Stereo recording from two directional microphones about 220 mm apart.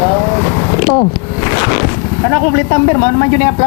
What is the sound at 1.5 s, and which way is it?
Vehicle, 15° left (ahead or behind).